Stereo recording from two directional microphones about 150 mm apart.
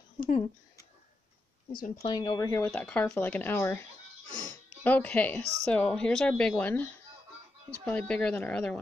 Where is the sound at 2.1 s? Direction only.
30° left (ahead or behind).